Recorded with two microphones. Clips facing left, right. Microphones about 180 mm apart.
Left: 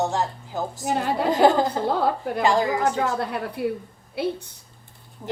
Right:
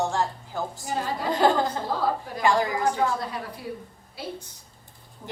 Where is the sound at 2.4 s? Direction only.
25° left (ahead or behind).